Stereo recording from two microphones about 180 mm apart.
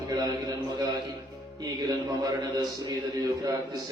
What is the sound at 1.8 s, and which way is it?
Speech, 20° right (ahead or behind).